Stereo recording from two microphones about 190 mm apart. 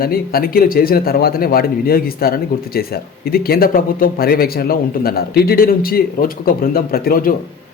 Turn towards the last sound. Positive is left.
turn(degrees=50)  # may be behind; listen again after turning